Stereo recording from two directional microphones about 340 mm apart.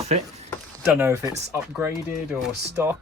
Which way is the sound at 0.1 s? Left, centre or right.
Centre.